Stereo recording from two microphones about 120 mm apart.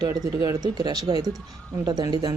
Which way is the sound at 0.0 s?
30° right (ahead or behind).